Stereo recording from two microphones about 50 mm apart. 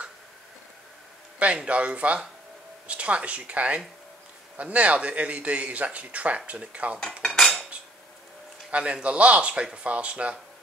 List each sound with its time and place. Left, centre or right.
1.4 s speech: right
7.0 s cutlery: centre
8.6 s speech: right